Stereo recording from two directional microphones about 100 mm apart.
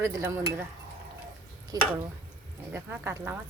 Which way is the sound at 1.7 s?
40° right (ahead or behind).